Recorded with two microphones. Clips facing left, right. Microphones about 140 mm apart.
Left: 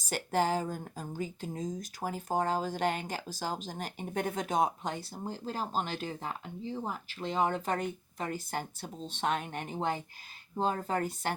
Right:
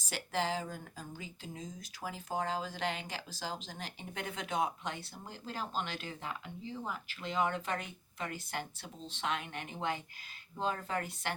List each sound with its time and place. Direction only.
0.1 s speech: 45° left (ahead or behind)